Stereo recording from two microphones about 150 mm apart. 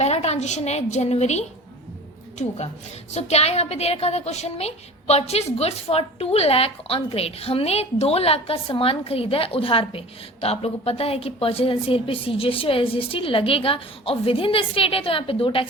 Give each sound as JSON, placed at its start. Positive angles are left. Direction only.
{"t": 0.0, "sound": "a woman's voice", "side_deg": 45}
{"t": 3.1, "sound": "a woman's voice", "side_deg": 45}